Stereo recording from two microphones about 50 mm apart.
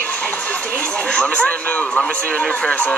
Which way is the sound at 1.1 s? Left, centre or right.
Left.